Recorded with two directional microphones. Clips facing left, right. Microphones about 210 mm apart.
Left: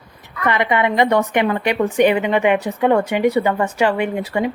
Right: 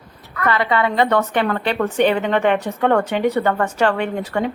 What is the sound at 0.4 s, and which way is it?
A woman's voice, 15° left (ahead or behind).